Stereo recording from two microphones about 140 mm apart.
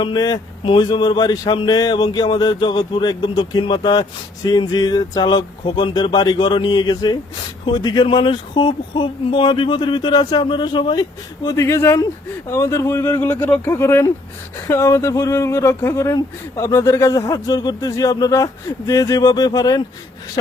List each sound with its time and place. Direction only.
0.0 s speech: 30° left (ahead or behind)
11.4 s speech: 20° left (ahead or behind)